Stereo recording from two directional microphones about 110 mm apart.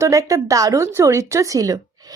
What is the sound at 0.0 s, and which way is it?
A woman's voice, 30° right (ahead or behind).